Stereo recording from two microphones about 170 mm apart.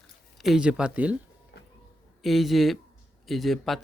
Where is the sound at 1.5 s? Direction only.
75° left (ahead or behind).